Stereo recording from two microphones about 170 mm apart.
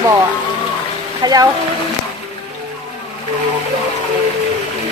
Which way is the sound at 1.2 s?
20° right (ahead or behind).